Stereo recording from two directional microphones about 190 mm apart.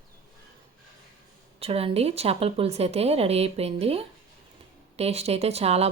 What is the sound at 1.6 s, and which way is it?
Speech, 30° right (ahead or behind).